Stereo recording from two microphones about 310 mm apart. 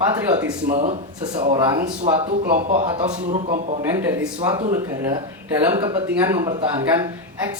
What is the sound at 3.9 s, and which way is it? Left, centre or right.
Speech, centre.